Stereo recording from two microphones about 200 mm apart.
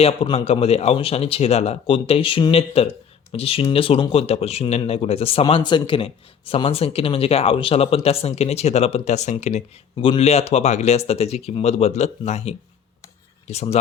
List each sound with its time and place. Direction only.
0.0 s speech: 30° left (ahead or behind)